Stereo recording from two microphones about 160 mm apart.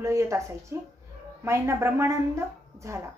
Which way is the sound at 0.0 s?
20° right (ahead or behind).